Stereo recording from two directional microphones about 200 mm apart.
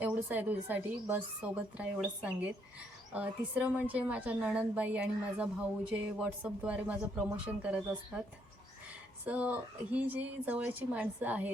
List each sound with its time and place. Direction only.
0.0 s a woman's voice: 10° right (ahead or behind)
9.2 s a woman's voice: 5° right (ahead or behind)